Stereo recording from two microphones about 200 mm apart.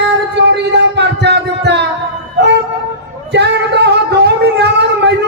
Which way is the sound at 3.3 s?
60° right (ahead or behind).